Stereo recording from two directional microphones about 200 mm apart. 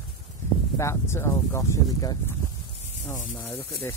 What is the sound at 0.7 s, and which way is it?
Speech, 15° left (ahead or behind).